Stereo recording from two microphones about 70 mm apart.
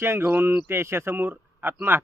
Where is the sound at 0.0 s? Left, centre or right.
Right.